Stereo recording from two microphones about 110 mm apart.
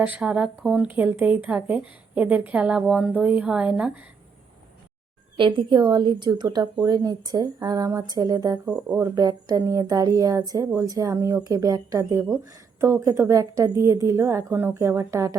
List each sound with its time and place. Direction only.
0.0 s a woman's voice: 10° right (ahead or behind)
0.9 s a woman's voice: 15° right (ahead or behind)
5.4 s a woman's voice: 50° right (ahead or behind)
8.6 s a woman's voice: 15° right (ahead or behind)
9.0 s speech: 35° right (ahead or behind)